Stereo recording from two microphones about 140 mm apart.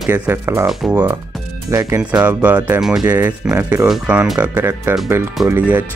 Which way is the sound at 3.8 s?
5° right (ahead or behind).